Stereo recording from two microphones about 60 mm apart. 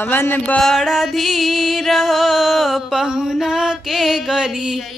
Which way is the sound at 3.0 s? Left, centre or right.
Centre.